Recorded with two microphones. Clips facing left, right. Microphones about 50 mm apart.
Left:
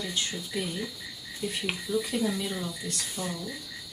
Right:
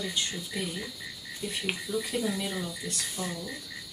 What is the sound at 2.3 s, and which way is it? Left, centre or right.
Speech, centre.